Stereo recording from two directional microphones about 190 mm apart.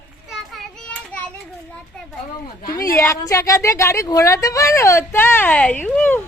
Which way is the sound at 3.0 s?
15° left (ahead or behind).